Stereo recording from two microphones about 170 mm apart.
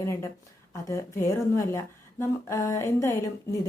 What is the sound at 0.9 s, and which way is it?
A woman's voice, 15° left (ahead or behind).